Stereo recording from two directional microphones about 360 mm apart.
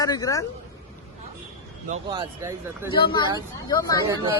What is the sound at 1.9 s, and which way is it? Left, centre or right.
Speech, centre.